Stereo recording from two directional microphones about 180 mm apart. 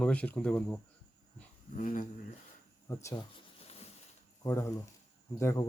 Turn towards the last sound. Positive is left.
turn(degrees=15)  # may be behind; listen again after turning